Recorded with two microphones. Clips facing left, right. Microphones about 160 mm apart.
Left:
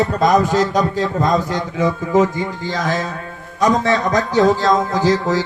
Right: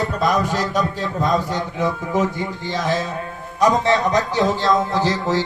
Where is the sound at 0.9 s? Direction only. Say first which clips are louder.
Left 3 dB; 90° left.